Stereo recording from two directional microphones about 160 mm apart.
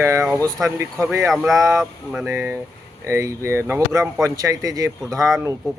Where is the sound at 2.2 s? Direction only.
15° right (ahead or behind).